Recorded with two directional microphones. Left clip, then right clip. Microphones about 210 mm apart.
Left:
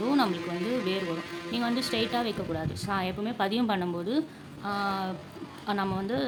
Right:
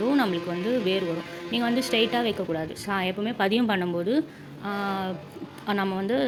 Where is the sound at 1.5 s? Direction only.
5° right (ahead or behind).